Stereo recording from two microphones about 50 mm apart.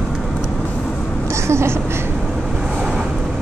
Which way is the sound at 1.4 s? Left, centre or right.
Right.